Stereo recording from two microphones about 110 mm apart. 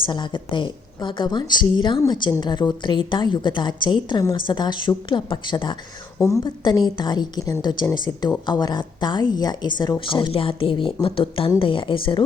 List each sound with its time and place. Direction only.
0.0 s a woman's voice: 45° left (ahead or behind)
6.1 s a woman's voice: 30° left (ahead or behind)
6.4 s a woman's voice: 40° left (ahead or behind)